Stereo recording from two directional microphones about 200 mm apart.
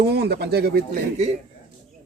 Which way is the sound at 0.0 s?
55° right (ahead or behind).